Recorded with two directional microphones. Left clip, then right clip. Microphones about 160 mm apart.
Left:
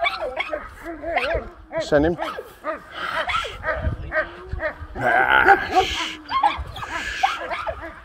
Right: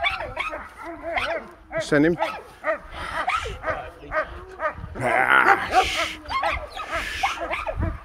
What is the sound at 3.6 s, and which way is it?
Bow-wow, 50° right (ahead or behind).